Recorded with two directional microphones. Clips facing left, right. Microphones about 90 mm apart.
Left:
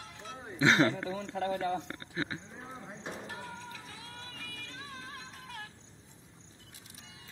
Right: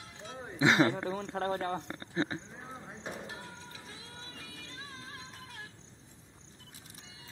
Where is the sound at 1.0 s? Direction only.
40° right (ahead or behind).